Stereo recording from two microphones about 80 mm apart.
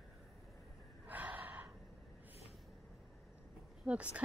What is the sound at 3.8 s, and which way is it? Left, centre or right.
Speech, centre.